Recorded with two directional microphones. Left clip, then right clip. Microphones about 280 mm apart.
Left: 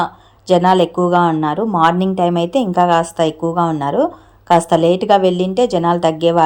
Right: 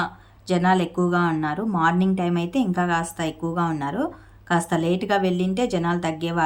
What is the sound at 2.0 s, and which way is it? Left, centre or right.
Speech, centre.